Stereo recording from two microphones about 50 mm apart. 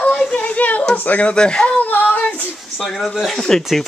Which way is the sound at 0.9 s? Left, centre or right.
Left.